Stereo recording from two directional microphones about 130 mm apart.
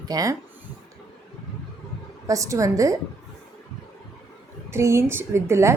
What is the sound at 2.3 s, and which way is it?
Speech, 25° right (ahead or behind).